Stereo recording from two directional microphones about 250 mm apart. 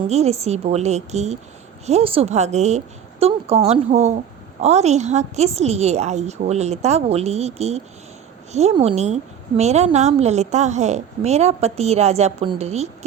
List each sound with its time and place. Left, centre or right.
0.1 s a woman's voice: right